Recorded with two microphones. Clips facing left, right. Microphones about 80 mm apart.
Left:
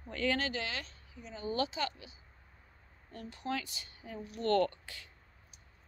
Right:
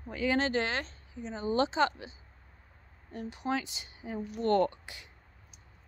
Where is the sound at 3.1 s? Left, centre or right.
Centre.